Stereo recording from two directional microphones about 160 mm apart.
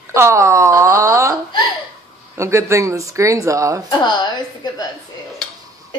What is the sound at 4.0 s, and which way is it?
Speech, 30° left (ahead or behind).